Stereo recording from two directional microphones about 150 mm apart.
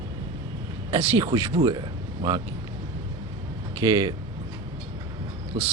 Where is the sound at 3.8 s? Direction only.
25° right (ahead or behind).